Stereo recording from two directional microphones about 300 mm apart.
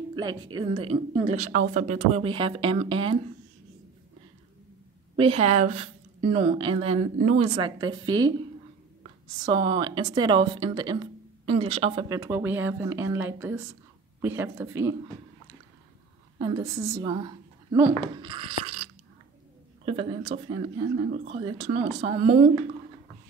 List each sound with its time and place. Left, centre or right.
0.1 s speech: centre
5.1 s speech: centre
16.3 s speech: centre
19.8 s speech: centre